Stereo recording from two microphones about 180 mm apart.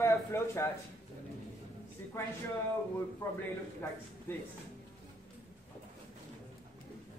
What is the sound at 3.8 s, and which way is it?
Speech, 10° left (ahead or behind).